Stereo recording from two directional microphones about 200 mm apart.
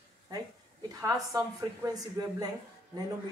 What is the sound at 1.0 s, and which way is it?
Speech, 15° right (ahead or behind).